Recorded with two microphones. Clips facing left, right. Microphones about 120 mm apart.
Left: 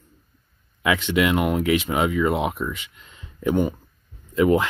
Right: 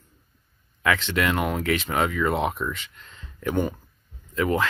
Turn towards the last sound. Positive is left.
turn(degrees=20)  # may be behind; listen again after turning